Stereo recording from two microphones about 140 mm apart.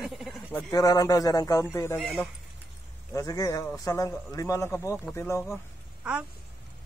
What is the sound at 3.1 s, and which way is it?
A man's voice, 25° left (ahead or behind).